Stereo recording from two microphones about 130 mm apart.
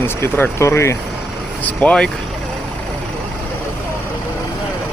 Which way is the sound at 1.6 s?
10° left (ahead or behind).